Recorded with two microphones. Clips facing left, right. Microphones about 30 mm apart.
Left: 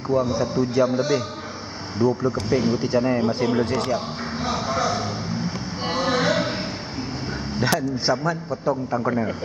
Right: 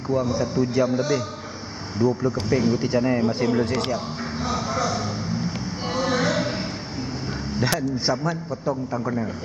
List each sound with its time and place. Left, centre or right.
0.1 s a man's voice: centre
2.8 s a man's voice: centre
3.9 s a sound: centre
7.5 s a man's voice: centre
9.0 s a man's voice: left